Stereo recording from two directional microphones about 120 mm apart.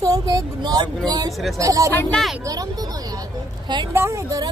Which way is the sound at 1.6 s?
30° right (ahead or behind).